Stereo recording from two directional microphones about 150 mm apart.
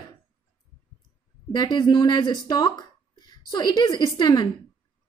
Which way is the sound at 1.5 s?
30° left (ahead or behind).